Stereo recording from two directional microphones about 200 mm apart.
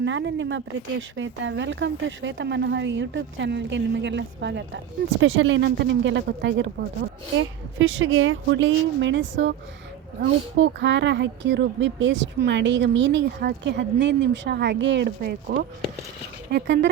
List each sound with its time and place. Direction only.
0.0 s a woman's voice: 65° right (ahead or behind)
5.2 s a woman's voice: 75° right (ahead or behind); by 16.9 s 55° right (ahead or behind)